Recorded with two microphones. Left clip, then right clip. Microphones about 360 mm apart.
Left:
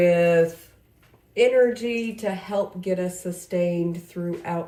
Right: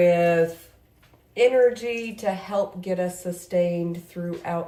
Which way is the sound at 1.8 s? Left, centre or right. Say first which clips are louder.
Even; centre.